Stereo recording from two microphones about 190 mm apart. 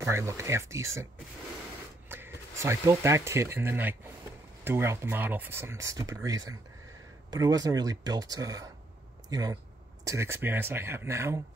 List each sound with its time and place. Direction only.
0.1 s speech: 15° right (ahead or behind)
2.0 s speech: 10° right (ahead or behind)